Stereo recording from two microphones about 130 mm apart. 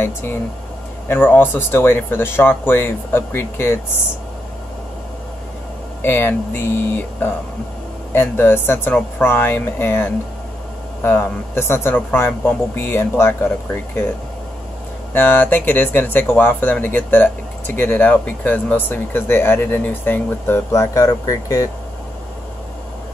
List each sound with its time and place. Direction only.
0.0 s speech: 20° left (ahead or behind)
6.0 s speech: 15° left (ahead or behind)
15.1 s speech: 15° left (ahead or behind)